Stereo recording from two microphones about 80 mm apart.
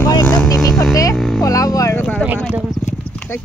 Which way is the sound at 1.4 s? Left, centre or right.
Left.